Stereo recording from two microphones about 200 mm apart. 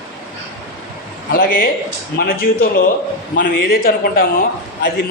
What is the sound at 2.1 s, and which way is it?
A man's voice, 45° left (ahead or behind).